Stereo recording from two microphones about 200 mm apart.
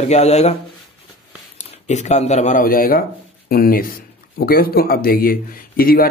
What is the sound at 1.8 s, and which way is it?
Speech, 35° left (ahead or behind).